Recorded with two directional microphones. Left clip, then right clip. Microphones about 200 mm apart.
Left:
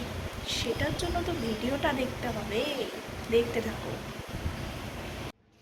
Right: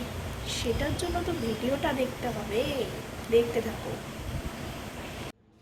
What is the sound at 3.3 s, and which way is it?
Speech, 15° right (ahead or behind).